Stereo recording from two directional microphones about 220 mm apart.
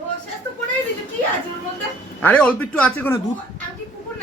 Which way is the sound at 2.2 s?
5° left (ahead or behind).